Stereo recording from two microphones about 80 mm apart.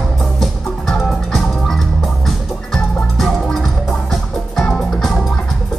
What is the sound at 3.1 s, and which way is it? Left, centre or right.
Music, centre.